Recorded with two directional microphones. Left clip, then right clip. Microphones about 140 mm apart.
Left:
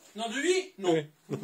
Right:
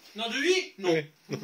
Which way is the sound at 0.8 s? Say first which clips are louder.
Right 1 dB; 20° left (ahead or behind).